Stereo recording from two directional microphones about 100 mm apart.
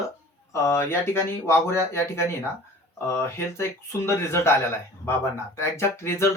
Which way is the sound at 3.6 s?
25° left (ahead or behind).